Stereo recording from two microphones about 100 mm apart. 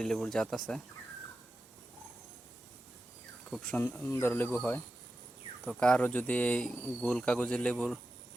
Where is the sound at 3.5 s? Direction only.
5° left (ahead or behind).